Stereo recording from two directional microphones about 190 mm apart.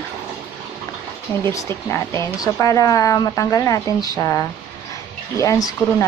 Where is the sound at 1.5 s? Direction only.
15° left (ahead or behind).